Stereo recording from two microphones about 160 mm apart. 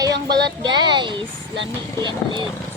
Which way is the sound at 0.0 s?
25° right (ahead or behind).